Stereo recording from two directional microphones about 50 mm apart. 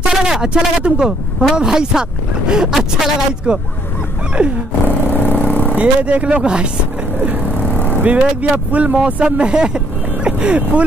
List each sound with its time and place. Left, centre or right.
0.0 s speech: centre
3.5 s speech: right
4.4 s roar: centre
4.8 s vehicle: left
5.8 s speech: right
8.0 s speech: right